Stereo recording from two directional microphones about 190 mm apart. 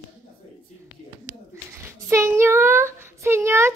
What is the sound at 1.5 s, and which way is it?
A child's voice, 15° right (ahead or behind).